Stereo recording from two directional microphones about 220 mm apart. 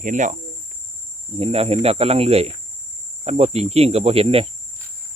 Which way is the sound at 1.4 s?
25° right (ahead or behind).